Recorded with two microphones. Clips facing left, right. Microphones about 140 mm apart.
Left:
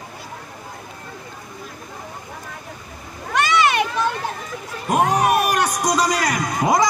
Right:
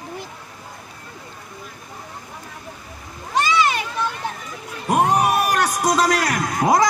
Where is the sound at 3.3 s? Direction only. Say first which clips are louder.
Left 1 dB; 65° left (ahead or behind).